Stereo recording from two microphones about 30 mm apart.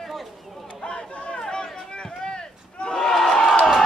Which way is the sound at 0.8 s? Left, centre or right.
Left.